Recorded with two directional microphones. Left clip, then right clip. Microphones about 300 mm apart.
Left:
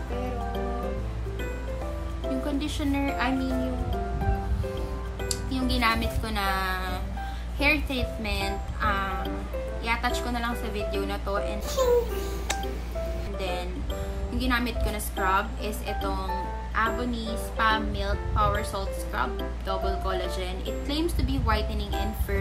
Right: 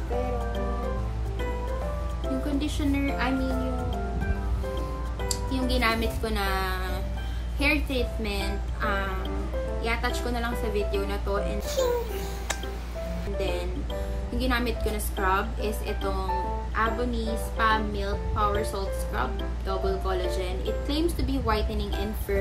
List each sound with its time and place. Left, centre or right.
2.4 s speech: centre
5.5 s a woman's voice: centre
11.7 s speech: right
13.4 s speech: centre